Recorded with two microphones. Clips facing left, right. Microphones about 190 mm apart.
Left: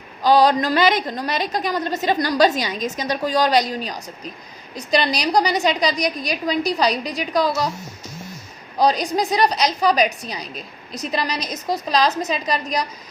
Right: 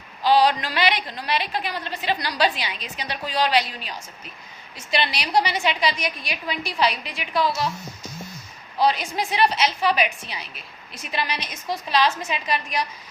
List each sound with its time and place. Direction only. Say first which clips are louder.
0.2 s a woman's voice: left 3 dB; 40° left (ahead or behind)
8.8 s a woman's voice: left 4 dB; 40° left (ahead or behind)